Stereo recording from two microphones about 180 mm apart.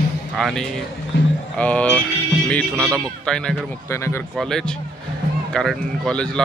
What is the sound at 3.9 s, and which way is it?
Speech, 15° left (ahead or behind).